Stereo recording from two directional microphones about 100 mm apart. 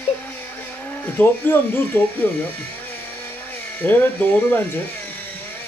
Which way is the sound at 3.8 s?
20° left (ahead or behind).